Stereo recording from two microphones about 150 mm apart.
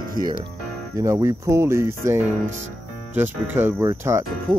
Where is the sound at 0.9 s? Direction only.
20° right (ahead or behind).